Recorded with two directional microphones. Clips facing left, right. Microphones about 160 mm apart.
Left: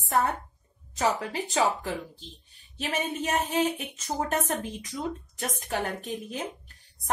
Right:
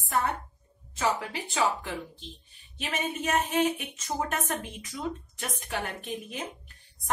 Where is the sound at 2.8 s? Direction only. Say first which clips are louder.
Left 2 dB; 35° left (ahead or behind).